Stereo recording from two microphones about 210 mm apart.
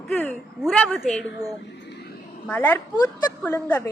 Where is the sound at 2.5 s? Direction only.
10° left (ahead or behind).